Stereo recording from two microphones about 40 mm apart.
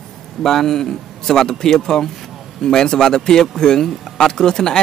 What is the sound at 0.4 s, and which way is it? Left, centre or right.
Speech, centre.